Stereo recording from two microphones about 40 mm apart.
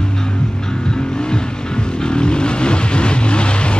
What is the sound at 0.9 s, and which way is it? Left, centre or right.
Vehicle, centre.